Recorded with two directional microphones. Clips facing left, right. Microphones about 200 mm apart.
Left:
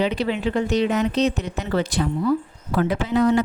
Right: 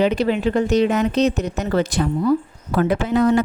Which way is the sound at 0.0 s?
45° right (ahead or behind).